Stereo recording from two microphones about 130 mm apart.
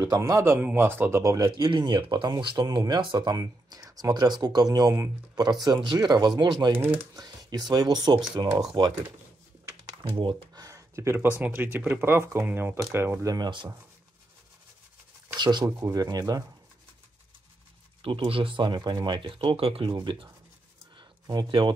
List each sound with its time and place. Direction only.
0.0 s speech: 25° right (ahead or behind)
1.4 s speech: 35° right (ahead or behind)
6.8 s speech: 15° right (ahead or behind)
7.2 s speech: 30° right (ahead or behind)
10.0 s speech: 40° right (ahead or behind)
15.3 s speech: 35° right (ahead or behind)
18.0 s speech: 45° right (ahead or behind)
21.3 s speech: 35° right (ahead or behind)